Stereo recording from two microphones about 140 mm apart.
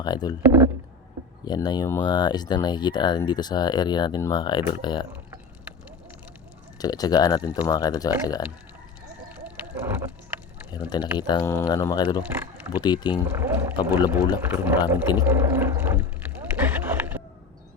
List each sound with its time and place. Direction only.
0.0 s speech: 30° left (ahead or behind)
1.5 s speech: 30° left (ahead or behind)
5.1 s a sound: 10° right (ahead or behind)
6.7 s speech: 30° left (ahead or behind)
9.3 s vehicle: 10° right (ahead or behind)
10.7 s speech: 30° left (ahead or behind)
12.2 s speech: 10° right (ahead or behind)
12.8 s speech: 30° left (ahead or behind)
13.2 s speech: 15° right (ahead or behind)
14.4 s a sound: 15° right (ahead or behind)